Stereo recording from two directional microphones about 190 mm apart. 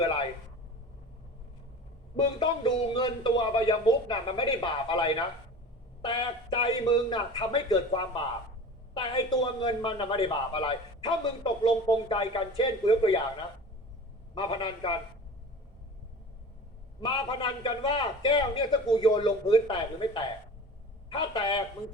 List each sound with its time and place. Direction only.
2.4 s a man's voice: 25° left (ahead or behind)
14.3 s a man's voice: 25° left (ahead or behind)
17.0 s a man's voice: 30° left (ahead or behind)